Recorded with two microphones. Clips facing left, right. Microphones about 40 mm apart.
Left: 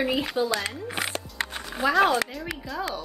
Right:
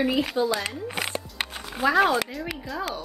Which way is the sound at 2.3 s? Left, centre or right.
Centre.